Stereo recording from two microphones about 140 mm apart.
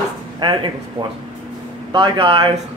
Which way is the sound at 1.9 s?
35° right (ahead or behind).